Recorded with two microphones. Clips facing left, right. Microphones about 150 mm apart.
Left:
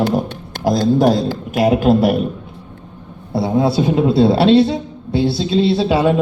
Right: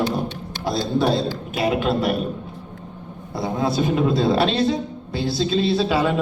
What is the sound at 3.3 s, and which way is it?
A man's voice, 30° left (ahead or behind).